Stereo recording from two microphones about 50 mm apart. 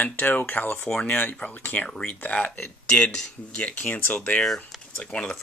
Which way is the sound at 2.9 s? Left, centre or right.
Centre.